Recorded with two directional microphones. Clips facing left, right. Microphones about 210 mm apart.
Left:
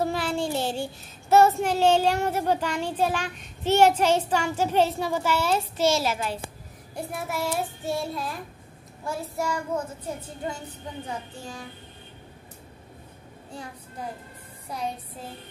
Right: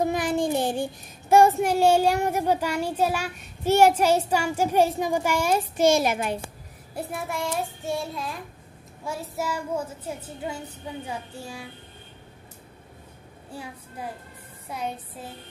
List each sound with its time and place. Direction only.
0.0 s child singing: 15° right (ahead or behind)
1.3 s a child's voice: 15° right (ahead or behind)
7.0 s child singing: centre (ahead or behind)
9.0 s a child's voice: centre (ahead or behind)